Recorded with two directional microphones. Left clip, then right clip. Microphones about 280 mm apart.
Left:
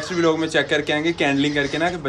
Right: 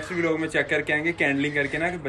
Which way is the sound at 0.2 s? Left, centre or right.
Centre.